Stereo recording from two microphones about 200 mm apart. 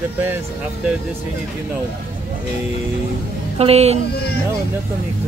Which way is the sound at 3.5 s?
30° right (ahead or behind).